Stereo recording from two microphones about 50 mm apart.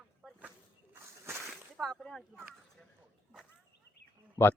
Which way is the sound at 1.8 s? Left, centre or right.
Centre.